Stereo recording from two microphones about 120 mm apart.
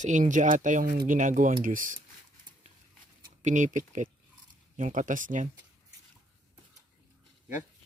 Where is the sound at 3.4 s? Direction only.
90° right.